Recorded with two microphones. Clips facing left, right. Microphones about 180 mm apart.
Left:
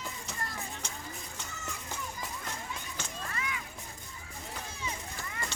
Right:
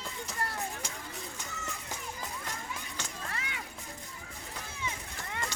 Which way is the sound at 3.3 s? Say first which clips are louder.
Left 5 dB; 70° right (ahead or behind).